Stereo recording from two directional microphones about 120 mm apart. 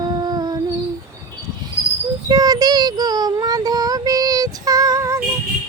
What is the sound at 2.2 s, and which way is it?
Child singing, 35° right (ahead or behind).